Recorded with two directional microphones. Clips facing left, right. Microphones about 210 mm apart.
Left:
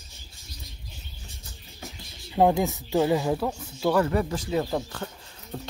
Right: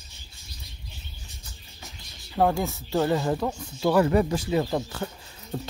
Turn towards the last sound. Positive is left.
turn(degrees=-10)  # may be behind; listen again after turning